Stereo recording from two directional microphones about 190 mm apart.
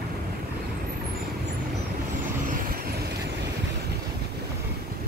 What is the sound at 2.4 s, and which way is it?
Vehicle, 50° right (ahead or behind).